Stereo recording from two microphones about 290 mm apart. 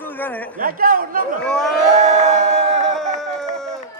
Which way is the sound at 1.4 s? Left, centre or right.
Centre.